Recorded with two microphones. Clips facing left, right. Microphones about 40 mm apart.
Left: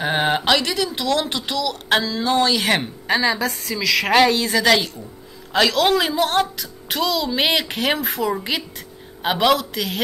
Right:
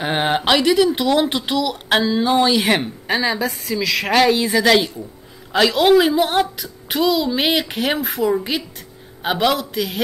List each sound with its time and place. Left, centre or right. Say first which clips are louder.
0.0 s a woman's voice: right 1 dB; centre
4.4 s a woman's voice: right 2 dB; centre